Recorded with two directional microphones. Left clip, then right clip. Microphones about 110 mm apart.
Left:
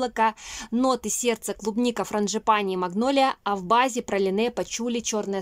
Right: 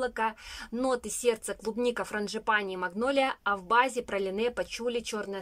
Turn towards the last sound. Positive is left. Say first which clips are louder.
# left 5 dB
turn(degrees=30)  # may be behind; listen again after turning